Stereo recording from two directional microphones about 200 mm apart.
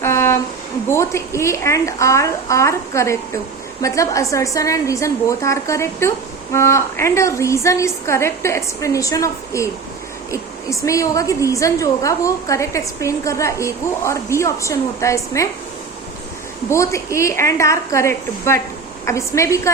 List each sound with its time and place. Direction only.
0.0 s a sound: 10° left (ahead or behind)
0.9 s a woman's voice: 15° left (ahead or behind)
16.6 s a woman's voice: 15° left (ahead or behind)